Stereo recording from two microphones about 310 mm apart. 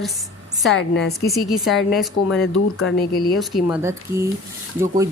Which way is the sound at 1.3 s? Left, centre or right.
Centre.